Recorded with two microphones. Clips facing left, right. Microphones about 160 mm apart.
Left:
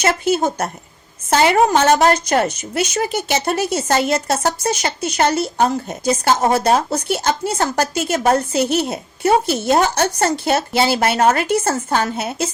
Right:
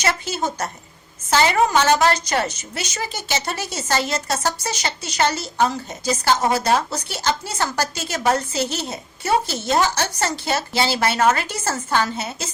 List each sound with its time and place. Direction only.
0.0 s a woman's voice: 55° left (ahead or behind)
12.1 s a woman's voice: 60° left (ahead or behind)